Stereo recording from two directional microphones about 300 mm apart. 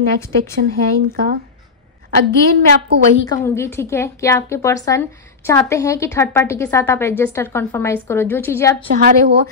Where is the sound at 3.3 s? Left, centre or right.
Centre.